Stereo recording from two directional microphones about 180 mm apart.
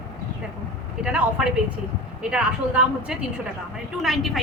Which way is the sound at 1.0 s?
5° right (ahead or behind).